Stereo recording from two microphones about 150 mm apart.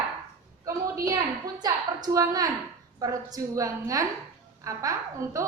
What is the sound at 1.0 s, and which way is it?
A woman's voice, 25° right (ahead or behind).